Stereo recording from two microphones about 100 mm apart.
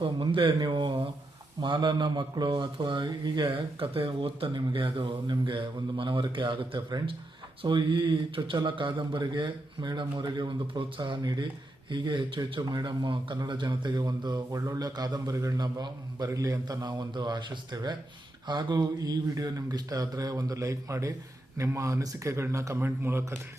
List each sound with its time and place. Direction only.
0.0 s speech: 55° right (ahead or behind)
1.6 s a man's voice: 50° right (ahead or behind); by 16.7 s 35° right (ahead or behind)
16.8 s a man's voice: 45° right (ahead or behind); by 23.4 s 25° right (ahead or behind)